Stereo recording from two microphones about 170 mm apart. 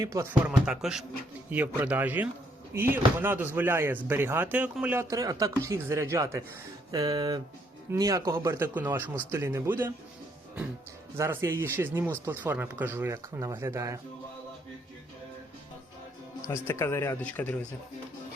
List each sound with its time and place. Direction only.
0.0 s speech: 15° right (ahead or behind)
0.6 s speech: 5° right (ahead or behind)
11.2 s speech: 15° right (ahead or behind)
16.5 s speech: 15° left (ahead or behind)